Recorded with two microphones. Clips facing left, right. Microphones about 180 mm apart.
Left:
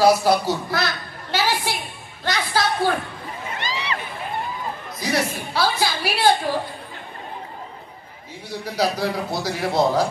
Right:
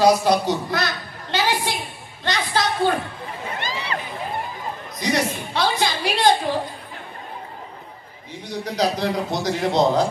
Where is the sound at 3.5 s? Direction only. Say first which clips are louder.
Left 2 dB; 50° right (ahead or behind).